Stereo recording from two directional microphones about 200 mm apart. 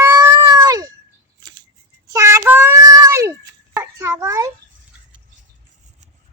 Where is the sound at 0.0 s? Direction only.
15° right (ahead or behind).